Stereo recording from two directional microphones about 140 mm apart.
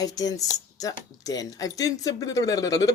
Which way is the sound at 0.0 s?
25° left (ahead or behind).